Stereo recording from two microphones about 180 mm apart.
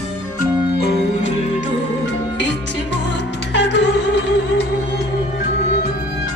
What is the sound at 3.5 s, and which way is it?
Music, 75° left (ahead or behind).